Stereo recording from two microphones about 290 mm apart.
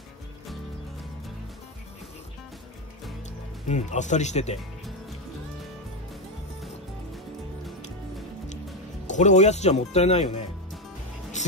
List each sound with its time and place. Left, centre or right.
3.6 s speech: left
9.0 s speech: left
11.4 s music: left